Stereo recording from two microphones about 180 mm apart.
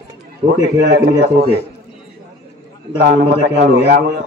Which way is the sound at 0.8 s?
65° right (ahead or behind).